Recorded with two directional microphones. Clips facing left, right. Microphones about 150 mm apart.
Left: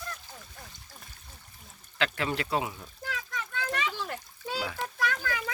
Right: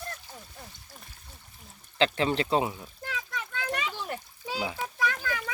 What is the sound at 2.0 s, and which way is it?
Speech, 25° right (ahead or behind).